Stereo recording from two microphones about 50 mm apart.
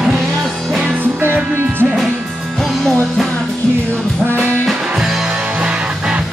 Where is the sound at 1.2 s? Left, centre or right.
Right.